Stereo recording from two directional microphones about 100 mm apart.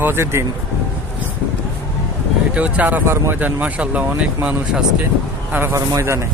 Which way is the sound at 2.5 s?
15° right (ahead or behind).